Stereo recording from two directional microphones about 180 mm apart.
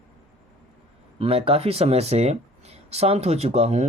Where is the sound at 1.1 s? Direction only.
30° right (ahead or behind).